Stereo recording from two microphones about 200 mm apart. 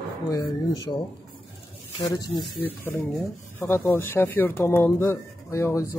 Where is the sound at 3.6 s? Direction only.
10° left (ahead or behind).